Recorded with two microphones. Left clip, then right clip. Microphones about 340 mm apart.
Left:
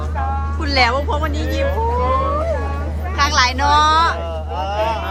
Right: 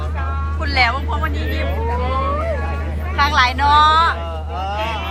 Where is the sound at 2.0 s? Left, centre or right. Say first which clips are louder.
Left 2 dB; left.